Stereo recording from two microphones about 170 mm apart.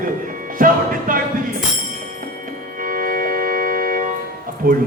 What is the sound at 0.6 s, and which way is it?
Music, 55° right (ahead or behind).